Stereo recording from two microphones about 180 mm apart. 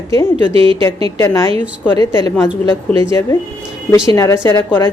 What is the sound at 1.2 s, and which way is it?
A woman's voice, 15° left (ahead or behind).